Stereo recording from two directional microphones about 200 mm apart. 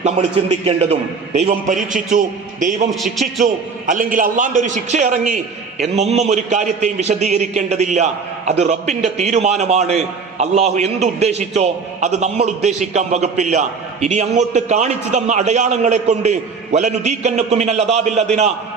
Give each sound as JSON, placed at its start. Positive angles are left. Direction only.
{"t": 0.0, "sound": "a man's voice", "side_deg": -35}
{"t": 2.9, "sound": "a man's voice", "side_deg": 0}
{"t": 3.4, "sound": "a man's voice", "side_deg": -40}